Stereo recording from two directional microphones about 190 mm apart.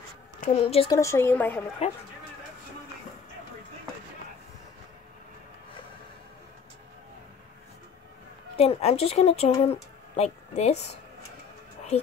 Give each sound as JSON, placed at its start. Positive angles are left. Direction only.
{"t": 0.4, "sound": "a woman's voice", "side_deg": 35}
{"t": 0.8, "sound": "a woman's voice", "side_deg": 15}
{"t": 1.8, "sound": "a woman's voice", "side_deg": 35}
{"t": 8.5, "sound": "a woman's voice", "side_deg": 30}